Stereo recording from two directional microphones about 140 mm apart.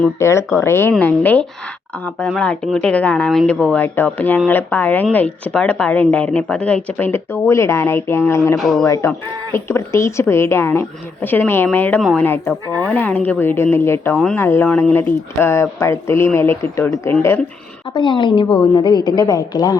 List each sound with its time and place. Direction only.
0.2 s a woman's voice: 20° left (ahead or behind)
8.5 s speech: centre (ahead or behind)
9.0 s a woman's voice: 15° left (ahead or behind)
17.9 s a woman's voice: 35° left (ahead or behind)